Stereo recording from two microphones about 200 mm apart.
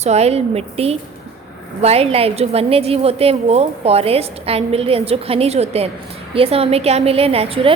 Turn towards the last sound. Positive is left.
turn(degrees=-30)  # may be behind; listen again after turning